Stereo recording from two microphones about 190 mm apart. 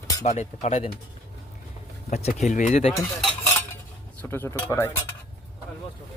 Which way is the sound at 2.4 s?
40° left (ahead or behind).